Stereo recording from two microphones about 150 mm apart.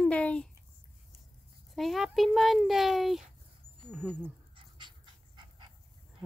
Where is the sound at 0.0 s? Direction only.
10° left (ahead or behind).